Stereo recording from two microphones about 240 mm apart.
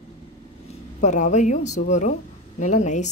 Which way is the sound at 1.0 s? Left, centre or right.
Left.